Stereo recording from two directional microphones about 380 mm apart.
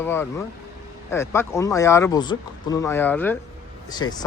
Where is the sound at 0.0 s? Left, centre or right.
Centre.